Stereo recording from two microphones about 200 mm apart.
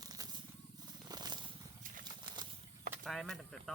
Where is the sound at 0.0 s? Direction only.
20° right (ahead or behind).